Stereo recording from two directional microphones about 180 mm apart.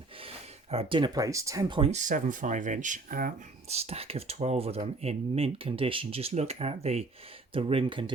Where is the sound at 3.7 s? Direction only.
35° right (ahead or behind).